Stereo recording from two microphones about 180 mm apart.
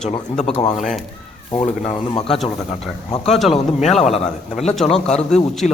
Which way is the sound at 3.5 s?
35° left (ahead or behind).